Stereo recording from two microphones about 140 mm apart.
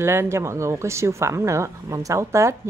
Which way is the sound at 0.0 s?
20° right (ahead or behind).